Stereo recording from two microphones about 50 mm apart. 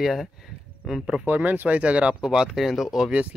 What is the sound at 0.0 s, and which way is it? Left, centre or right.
Speech, centre.